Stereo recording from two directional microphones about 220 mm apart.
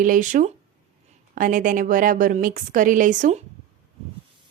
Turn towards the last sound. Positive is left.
turn(degrees=-30)  # may be behind; listen again after turning